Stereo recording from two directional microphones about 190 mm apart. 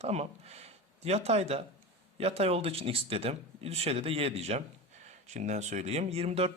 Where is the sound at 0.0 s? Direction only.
35° right (ahead or behind).